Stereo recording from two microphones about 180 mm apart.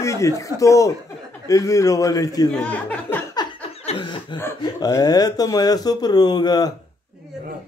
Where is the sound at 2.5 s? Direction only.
5° left (ahead or behind).